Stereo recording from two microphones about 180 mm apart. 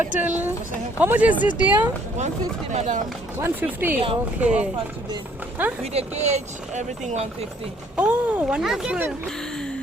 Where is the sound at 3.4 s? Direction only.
10° right (ahead or behind).